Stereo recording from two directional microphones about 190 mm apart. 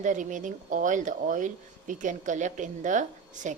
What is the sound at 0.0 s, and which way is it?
Speech, 40° right (ahead or behind).